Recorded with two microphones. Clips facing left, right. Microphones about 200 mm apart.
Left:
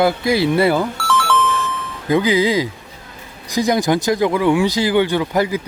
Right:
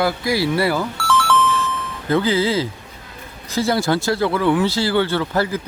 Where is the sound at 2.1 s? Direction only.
15° left (ahead or behind).